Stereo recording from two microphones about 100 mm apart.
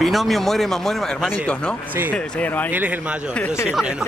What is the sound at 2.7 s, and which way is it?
Speech, 15° right (ahead or behind).